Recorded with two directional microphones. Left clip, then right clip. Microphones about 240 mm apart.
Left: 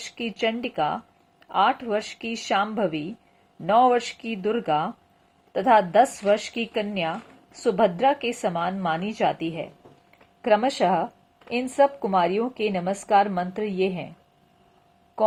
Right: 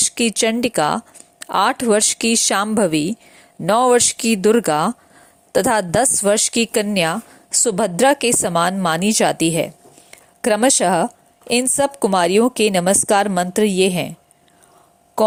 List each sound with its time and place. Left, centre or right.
0.2 s a woman's voice: right